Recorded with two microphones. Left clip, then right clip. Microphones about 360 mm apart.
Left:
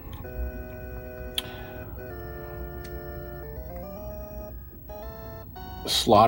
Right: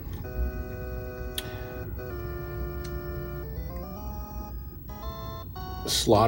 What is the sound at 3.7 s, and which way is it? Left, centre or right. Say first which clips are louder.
Music: left 2 dB; centre.